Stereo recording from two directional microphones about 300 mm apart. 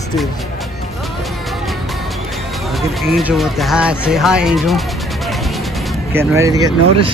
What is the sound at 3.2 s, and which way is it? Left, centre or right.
Speech, centre.